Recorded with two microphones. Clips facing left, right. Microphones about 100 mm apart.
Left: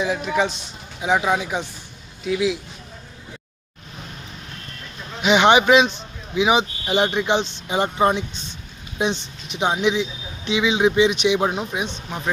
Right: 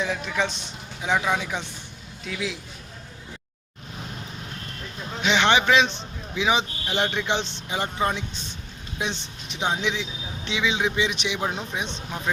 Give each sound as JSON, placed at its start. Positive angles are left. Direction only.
{"t": 0.0, "sound": "a man's voice", "side_deg": 10}
{"t": 5.2, "sound": "a man's voice", "side_deg": 15}
{"t": 11.5, "sound": "a man's voice", "side_deg": 10}